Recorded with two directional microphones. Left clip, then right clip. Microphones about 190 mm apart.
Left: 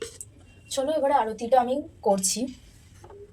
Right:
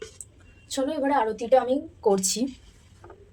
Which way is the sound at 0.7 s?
30° right (ahead or behind).